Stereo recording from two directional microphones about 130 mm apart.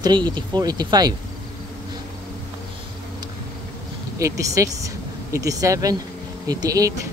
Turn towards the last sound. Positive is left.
turn(degrees=-25)  # may be behind; listen again after turning